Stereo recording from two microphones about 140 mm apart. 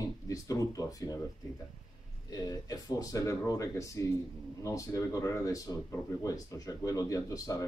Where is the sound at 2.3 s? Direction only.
25° left (ahead or behind).